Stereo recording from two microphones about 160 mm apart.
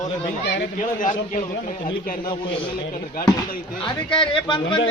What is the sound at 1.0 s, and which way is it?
Speech, 50° left (ahead or behind).